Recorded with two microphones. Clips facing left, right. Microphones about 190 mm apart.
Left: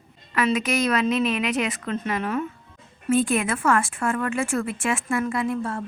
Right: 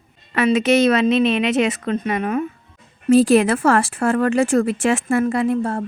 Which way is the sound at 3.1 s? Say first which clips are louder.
Right 9 dB; 85° right.